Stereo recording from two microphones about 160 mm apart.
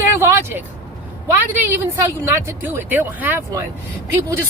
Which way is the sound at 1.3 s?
15° right (ahead or behind).